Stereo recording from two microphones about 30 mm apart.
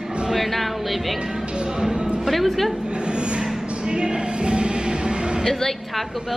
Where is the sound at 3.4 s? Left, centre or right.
Centre.